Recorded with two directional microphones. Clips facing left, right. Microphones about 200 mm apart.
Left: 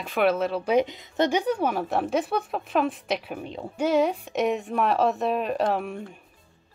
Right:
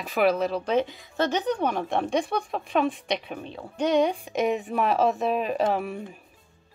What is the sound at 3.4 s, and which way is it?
Speech, 15° left (ahead or behind).